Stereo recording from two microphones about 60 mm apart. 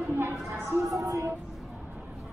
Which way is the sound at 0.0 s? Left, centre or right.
Right.